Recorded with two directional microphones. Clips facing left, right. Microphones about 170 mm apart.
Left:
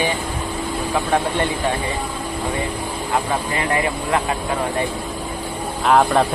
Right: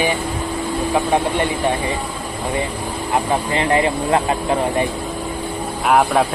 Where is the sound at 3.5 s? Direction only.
25° right (ahead or behind).